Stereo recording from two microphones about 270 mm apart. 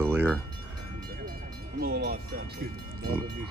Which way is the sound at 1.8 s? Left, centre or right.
Right.